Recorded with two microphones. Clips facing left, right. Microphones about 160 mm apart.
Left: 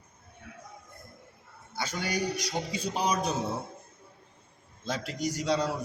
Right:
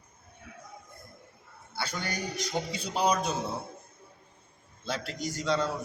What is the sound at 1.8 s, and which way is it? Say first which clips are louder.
A man's voice: left 3 dB; 15° left (ahead or behind).